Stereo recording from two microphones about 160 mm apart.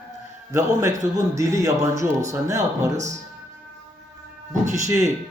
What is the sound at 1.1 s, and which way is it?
Speech, 20° right (ahead or behind).